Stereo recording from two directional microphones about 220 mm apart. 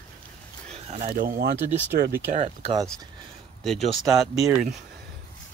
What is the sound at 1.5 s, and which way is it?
Speech, 10° right (ahead or behind).